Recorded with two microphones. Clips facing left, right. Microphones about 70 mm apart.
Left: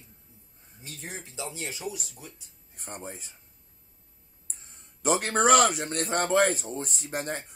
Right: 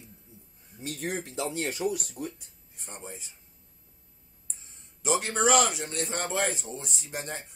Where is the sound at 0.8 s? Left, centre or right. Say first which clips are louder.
Right 8 dB; right.